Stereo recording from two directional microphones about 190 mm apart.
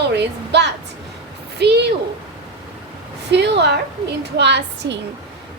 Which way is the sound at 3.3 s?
65° right (ahead or behind).